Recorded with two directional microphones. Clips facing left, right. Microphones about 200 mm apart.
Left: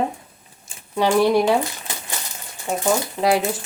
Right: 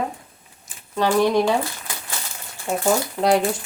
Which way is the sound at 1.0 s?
15° left (ahead or behind).